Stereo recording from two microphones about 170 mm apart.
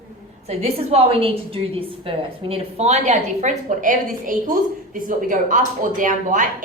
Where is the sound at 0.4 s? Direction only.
35° right (ahead or behind).